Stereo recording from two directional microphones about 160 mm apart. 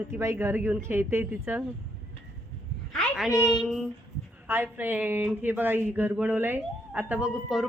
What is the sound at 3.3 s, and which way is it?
Speech, 20° left (ahead or behind).